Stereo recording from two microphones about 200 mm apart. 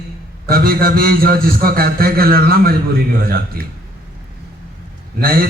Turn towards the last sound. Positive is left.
turn(degrees=-50)  # may be behind; listen again after turning